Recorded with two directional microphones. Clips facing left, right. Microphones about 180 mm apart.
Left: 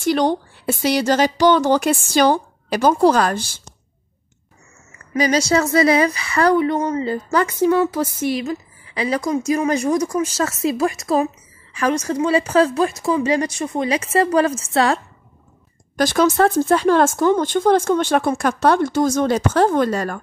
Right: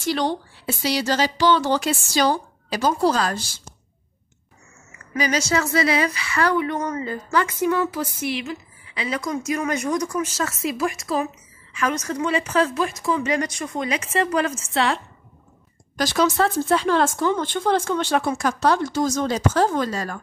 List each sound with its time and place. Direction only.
0.0 s speech: 50° left (ahead or behind)
5.2 s a woman's voice: 35° left (ahead or behind)
8.0 s a woman's voice: 40° left (ahead or behind)
16.0 s speech: 50° left (ahead or behind)